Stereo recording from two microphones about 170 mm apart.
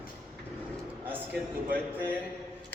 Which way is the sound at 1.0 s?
10° right (ahead or behind).